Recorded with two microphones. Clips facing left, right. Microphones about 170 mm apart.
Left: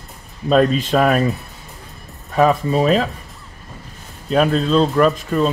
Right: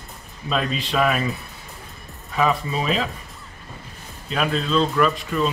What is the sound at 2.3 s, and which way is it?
Speech, 40° left (ahead or behind).